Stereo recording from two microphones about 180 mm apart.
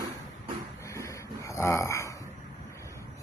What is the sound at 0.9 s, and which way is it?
Snoring, 15° left (ahead or behind).